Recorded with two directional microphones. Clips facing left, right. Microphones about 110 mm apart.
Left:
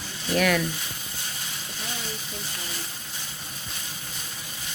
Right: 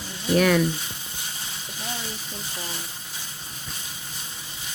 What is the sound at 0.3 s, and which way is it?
Speech, 30° right (ahead or behind).